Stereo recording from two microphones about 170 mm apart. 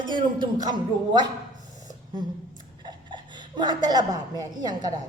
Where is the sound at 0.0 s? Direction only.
25° right (ahead or behind).